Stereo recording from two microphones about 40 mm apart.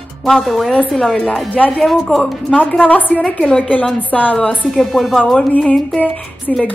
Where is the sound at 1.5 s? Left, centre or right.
Left.